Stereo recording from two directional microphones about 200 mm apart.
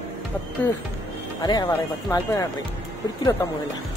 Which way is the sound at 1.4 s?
20° left (ahead or behind).